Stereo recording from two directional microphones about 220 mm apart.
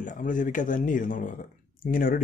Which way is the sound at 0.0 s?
35° left (ahead or behind).